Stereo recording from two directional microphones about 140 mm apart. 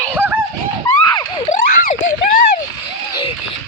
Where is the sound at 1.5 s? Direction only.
65° left (ahead or behind).